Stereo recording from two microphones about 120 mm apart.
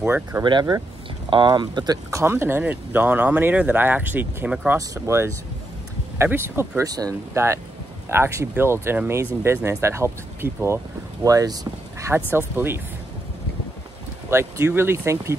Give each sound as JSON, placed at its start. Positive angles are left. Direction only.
{"t": 0.0, "sound": "speech", "side_deg": -20}
{"t": 0.4, "sound": "speech", "side_deg": -40}
{"t": 2.0, "sound": "speech", "side_deg": -25}
{"t": 6.8, "sound": "speech", "side_deg": -30}
{"t": 11.2, "sound": "speech", "side_deg": -30}
{"t": 12.3, "sound": "speech", "side_deg": -15}
{"t": 14.3, "sound": "speech", "side_deg": -20}